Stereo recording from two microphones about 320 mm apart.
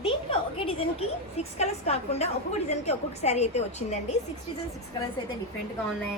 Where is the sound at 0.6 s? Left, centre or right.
Centre.